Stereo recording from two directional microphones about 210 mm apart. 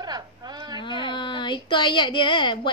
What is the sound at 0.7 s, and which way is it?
Speech, 20° left (ahead or behind).